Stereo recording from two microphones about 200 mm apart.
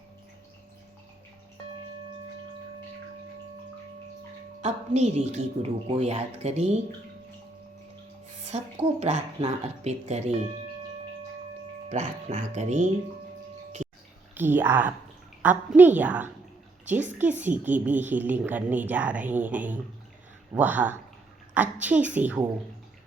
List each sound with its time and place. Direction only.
4.6 s speech: 35° right (ahead or behind)
8.4 s speech: 30° right (ahead or behind)
11.9 s speech: 35° right (ahead or behind)
14.3 s a woman's voice: 10° right (ahead or behind)